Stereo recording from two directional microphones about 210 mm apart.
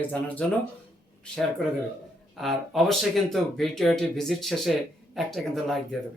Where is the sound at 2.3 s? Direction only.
Centre (ahead or behind).